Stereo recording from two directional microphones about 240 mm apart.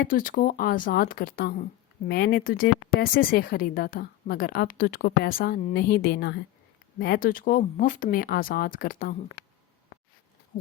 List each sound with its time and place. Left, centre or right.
0.0 s a woman's voice: left